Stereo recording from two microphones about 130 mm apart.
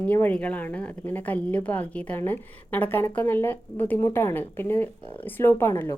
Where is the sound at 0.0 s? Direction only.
15° left (ahead or behind).